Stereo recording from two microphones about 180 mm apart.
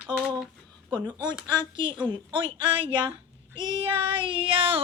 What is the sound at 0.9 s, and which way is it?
A woman's voice, 25° right (ahead or behind).